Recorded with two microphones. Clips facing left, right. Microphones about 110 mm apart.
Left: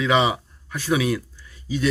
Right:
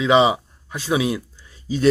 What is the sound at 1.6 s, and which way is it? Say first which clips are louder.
Speech: right 5 dB; 35° right (ahead or behind).